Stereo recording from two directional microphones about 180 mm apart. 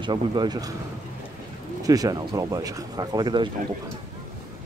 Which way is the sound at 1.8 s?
20° right (ahead or behind).